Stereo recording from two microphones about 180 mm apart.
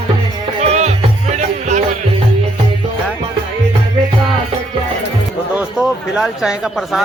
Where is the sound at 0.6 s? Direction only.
40° right (ahead or behind).